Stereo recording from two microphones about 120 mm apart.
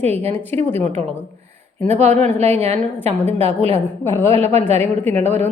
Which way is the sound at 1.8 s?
70° right (ahead or behind).